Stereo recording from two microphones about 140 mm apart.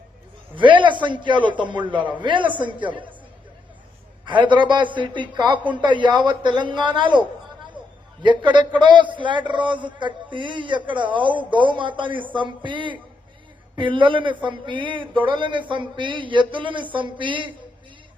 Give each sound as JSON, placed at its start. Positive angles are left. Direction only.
{"t": 0.5, "sound": "a man's voice", "side_deg": -35}
{"t": 4.3, "sound": "a man's voice", "side_deg": -35}
{"t": 8.2, "sound": "a man's voice", "side_deg": -35}